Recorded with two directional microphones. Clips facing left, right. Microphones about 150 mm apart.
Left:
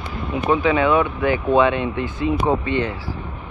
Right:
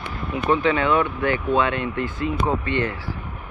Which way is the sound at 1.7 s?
25° left (ahead or behind).